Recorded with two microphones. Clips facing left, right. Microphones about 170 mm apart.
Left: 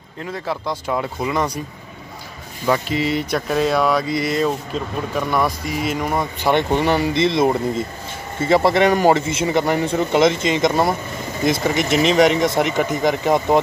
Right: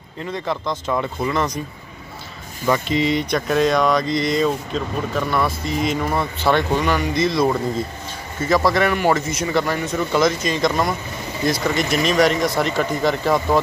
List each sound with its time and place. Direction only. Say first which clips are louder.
0.3 s speech: right 1 dB; 10° left (ahead or behind)
2.6 s speech: even; 5° left (ahead or behind)